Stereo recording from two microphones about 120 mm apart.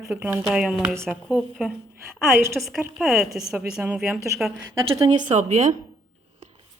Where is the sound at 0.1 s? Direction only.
15° right (ahead or behind).